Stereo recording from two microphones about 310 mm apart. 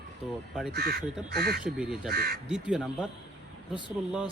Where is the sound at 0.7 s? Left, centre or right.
Right.